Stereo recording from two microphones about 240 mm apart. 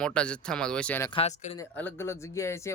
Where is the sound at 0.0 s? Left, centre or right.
Centre.